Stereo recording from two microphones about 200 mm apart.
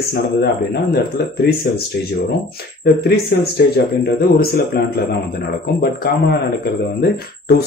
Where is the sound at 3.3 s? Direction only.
55° left (ahead or behind).